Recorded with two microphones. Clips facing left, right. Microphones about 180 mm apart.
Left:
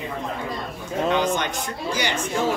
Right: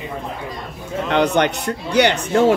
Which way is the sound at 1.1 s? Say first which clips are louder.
Right 8 dB; 65° right (ahead or behind).